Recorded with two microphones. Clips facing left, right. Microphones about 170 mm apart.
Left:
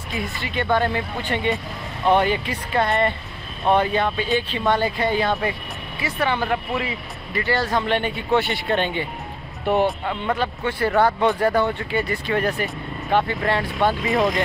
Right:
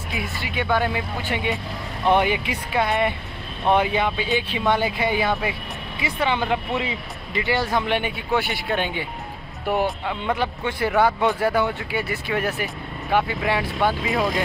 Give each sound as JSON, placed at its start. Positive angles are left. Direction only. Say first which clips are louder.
{"t": 0.6, "sound": "a man's voice", "louder": "left 2 dB", "side_deg": -5}